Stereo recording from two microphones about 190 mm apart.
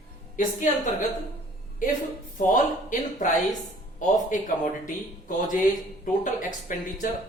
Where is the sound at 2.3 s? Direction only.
45° left (ahead or behind).